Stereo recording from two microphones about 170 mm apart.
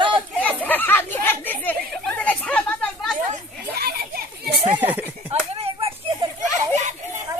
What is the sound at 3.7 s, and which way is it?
Children playing, 65° right (ahead or behind).